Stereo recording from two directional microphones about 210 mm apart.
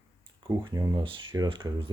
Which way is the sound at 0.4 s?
15° right (ahead or behind).